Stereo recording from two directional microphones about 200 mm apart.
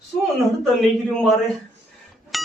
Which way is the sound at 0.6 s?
Centre (ahead or behind).